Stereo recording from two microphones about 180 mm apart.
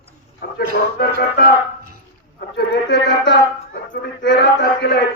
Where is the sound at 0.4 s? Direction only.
60° left (ahead or behind).